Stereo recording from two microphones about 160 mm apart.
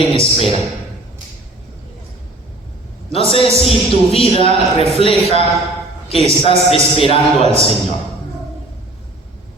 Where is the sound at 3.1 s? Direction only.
35° left (ahead or behind).